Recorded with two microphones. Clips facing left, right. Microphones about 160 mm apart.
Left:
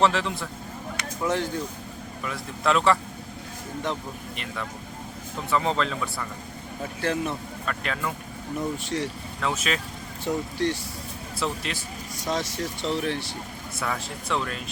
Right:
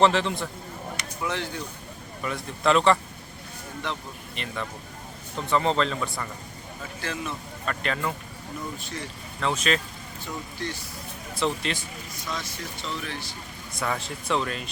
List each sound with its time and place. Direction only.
0.0 s speech: centre (ahead or behind)
1.3 s speech: 45° left (ahead or behind)
2.2 s speech: centre (ahead or behind)
3.9 s speech: 45° left (ahead or behind)
5.5 s speech: 5° left (ahead or behind)
7.0 s speech: 55° left (ahead or behind)
7.7 s speech: centre (ahead or behind)
8.5 s speech: 75° left (ahead or behind)
9.4 s speech: 5° left (ahead or behind)
10.2 s speech: 70° left (ahead or behind)
11.3 s speech: 5° left (ahead or behind)
12.2 s speech: 80° left
13.7 s speech: centre (ahead or behind)